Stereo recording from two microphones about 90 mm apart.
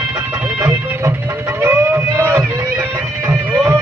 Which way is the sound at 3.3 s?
15° right (ahead or behind).